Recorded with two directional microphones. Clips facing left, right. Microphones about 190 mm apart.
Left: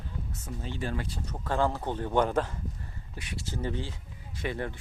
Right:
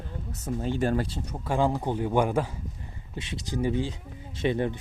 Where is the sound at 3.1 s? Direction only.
25° right (ahead or behind).